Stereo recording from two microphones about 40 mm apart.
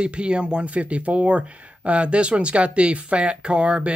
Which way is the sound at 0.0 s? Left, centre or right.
Right.